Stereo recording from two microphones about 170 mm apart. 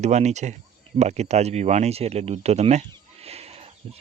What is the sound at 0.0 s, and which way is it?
Speech, 40° right (ahead or behind).